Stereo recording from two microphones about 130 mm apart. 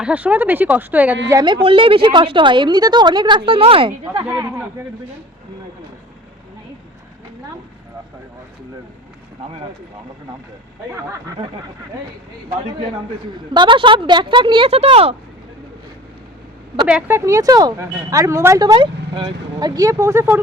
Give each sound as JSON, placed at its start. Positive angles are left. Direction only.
{"t": 0.0, "sound": "speech", "side_deg": -10}
{"t": 1.6, "sound": "a woman's voice", "side_deg": -45}
{"t": 4.3, "sound": "speech", "side_deg": -15}
{"t": 13.5, "sound": "a woman's voice", "side_deg": -35}
{"t": 16.7, "sound": "speech", "side_deg": -5}
{"t": 17.1, "sound": "speech", "side_deg": -20}
{"t": 18.7, "sound": "speech", "side_deg": -40}